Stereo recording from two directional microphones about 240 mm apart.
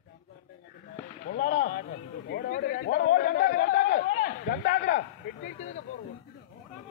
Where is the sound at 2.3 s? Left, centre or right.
Left.